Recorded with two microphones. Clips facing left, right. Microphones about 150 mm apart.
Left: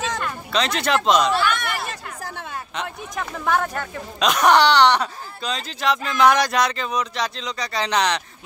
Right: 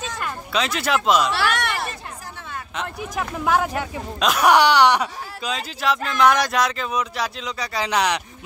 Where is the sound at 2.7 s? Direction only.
5° right (ahead or behind).